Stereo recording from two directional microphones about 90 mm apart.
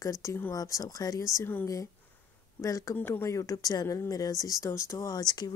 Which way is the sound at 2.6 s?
35° left (ahead or behind).